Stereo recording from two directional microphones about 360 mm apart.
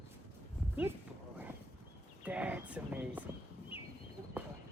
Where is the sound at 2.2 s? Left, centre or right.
Centre.